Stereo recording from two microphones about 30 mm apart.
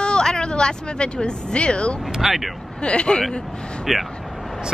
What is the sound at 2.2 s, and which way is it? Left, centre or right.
Speech, centre.